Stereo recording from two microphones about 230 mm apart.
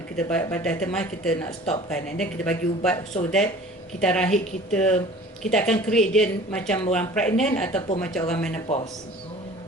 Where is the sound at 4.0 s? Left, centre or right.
Centre.